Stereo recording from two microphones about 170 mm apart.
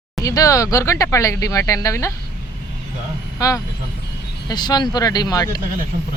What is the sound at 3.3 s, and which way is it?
Speech, 20° left (ahead or behind).